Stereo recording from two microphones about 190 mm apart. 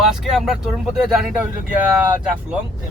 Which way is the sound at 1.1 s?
Centre (ahead or behind).